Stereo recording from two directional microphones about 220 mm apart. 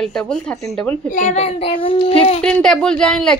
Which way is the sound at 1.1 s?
30° left (ahead or behind).